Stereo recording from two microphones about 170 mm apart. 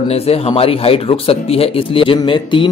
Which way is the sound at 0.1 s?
35° left (ahead or behind).